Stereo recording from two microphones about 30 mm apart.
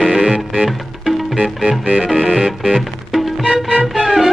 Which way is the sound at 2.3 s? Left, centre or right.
Right.